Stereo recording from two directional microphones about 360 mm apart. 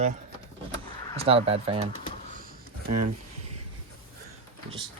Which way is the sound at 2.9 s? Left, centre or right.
Right.